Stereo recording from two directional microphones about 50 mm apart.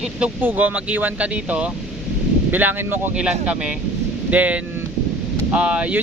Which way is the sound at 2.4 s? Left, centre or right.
Right.